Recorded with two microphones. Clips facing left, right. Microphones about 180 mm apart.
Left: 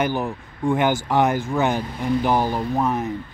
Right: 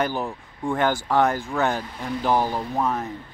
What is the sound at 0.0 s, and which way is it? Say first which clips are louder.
A man's voice: left 2 dB; 20° left (ahead or behind).